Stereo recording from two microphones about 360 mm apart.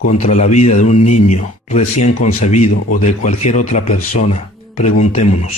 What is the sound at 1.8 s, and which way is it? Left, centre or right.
Speech, left.